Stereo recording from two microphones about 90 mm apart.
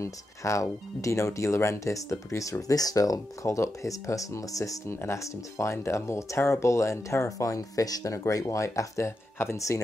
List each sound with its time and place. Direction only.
0.0 s speech: 35° left (ahead or behind)